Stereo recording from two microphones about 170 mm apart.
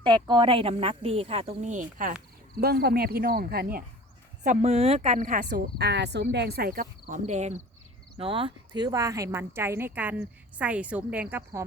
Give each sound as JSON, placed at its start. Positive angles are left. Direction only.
{"t": 0.0, "sound": "speech", "side_deg": -25}
{"t": 2.6, "sound": "speech", "side_deg": -65}
{"t": 4.4, "sound": "speech", "side_deg": -40}
{"t": 7.3, "sound": "speech", "side_deg": -40}
{"t": 8.2, "sound": "speech", "side_deg": -30}